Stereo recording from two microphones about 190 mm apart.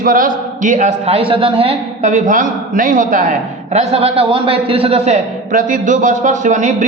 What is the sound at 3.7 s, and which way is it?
A man's voice, 30° right (ahead or behind).